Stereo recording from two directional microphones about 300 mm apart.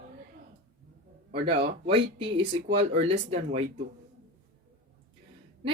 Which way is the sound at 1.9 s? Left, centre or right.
Centre.